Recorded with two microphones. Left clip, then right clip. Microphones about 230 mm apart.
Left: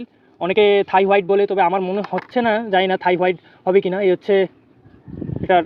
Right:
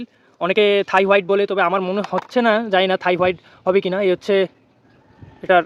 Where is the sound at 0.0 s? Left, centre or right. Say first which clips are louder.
Right 1 dB; centre.